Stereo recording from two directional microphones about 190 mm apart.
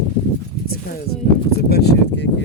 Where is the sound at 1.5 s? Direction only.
55° left (ahead or behind).